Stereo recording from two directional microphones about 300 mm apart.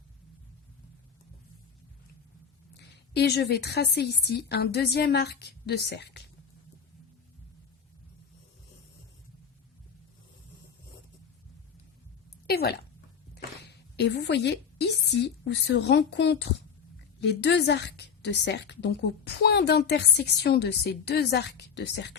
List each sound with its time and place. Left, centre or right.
2.7 s a woman's voice: left
12.5 s a sound: left
13.3 s a woman's voice: left